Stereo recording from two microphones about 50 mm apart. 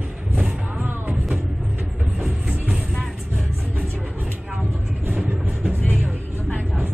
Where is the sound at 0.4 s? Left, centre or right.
Right.